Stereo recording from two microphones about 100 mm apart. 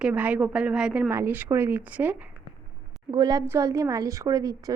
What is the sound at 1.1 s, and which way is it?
Speech, 20° right (ahead or behind).